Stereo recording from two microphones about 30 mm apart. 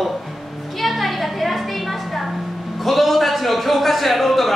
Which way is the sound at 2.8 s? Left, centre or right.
Centre.